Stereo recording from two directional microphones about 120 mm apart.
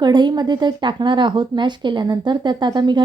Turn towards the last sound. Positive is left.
turn(degrees=-40)  # may be behind; listen again after turning